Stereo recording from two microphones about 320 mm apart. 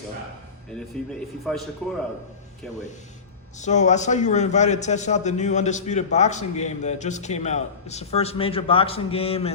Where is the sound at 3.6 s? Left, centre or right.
Left.